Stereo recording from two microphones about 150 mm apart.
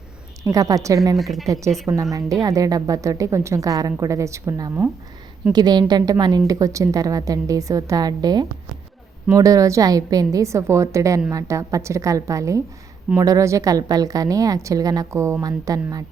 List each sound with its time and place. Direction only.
0.4 s a woman's voice: 20° right (ahead or behind)
1.1 s speech: centre (ahead or behind)
1.9 s a woman's voice: 20° right (ahead or behind)